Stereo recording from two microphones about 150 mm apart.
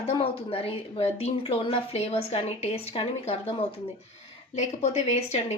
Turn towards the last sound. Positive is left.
turn(degrees=45)  # may be behind; listen again after turning